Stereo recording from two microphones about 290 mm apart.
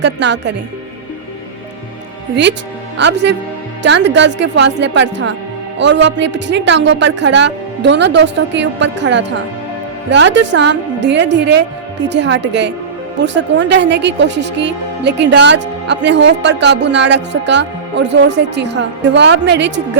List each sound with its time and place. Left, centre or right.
0.0 s a woman's voice: right
2.3 s a woman's voice: right